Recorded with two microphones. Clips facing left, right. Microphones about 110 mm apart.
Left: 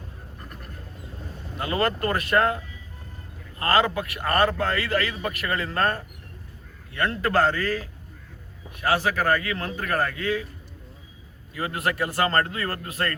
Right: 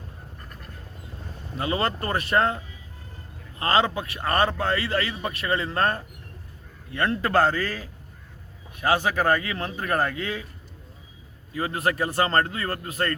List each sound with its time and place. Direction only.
1.5 s a man's voice: 25° right (ahead or behind)
3.6 s a man's voice: 25° right (ahead or behind)
8.8 s a man's voice: 25° right (ahead or behind)
11.5 s a man's voice: 25° right (ahead or behind)